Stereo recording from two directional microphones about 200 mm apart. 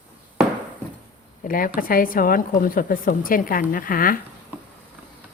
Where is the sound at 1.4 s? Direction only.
45° left (ahead or behind).